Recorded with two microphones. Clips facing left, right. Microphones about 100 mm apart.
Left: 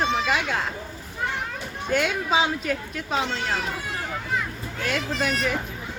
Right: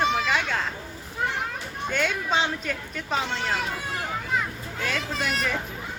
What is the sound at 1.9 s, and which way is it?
Speech, 5° left (ahead or behind).